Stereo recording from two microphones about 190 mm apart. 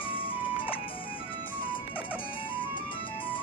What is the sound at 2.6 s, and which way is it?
Music, 25° left (ahead or behind).